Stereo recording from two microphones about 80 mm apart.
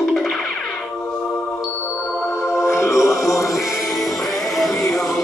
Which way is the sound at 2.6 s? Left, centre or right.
Left.